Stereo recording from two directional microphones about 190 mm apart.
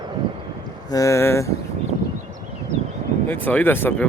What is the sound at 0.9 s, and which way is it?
Speech, 15° left (ahead or behind).